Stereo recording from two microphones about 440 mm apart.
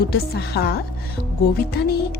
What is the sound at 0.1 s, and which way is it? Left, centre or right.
A woman's voice, left.